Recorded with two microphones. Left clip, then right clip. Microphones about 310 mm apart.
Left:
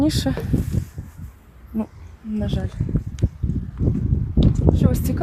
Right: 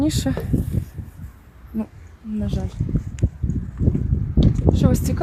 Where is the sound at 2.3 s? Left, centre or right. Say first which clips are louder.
Left 1 dB; centre.